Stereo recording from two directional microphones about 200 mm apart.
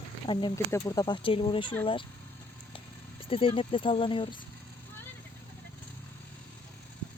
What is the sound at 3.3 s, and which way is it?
Speech, 25° left (ahead or behind).